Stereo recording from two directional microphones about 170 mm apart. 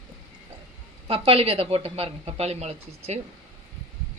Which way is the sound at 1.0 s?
35° right (ahead or behind).